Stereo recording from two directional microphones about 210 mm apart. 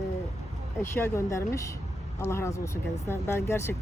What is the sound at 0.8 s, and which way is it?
Speech, 10° left (ahead or behind).